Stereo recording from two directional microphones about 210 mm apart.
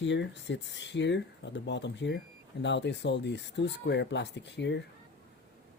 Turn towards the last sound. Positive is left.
turn(degrees=55)  # may be behind; listen again after turning